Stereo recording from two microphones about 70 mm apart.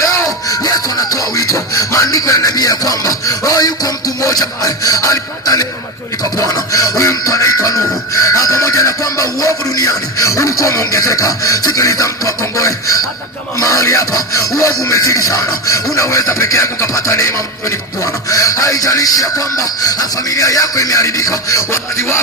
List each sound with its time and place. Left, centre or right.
0.0 s music: left
13.6 s speech: left